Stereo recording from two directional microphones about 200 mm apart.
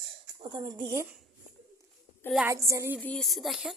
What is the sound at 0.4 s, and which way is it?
Speech, 25° right (ahead or behind).